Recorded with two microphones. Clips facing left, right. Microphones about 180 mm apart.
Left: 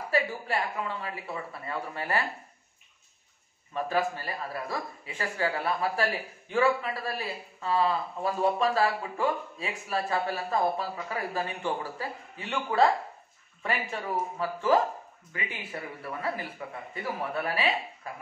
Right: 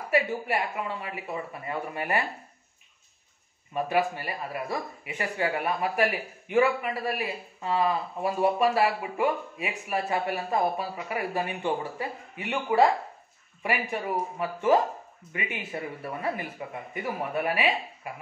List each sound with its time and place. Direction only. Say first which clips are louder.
0.1 s a man's voice: right 3 dB; 20° right (ahead or behind)
3.7 s a man's voice: right 2 dB; 15° right (ahead or behind)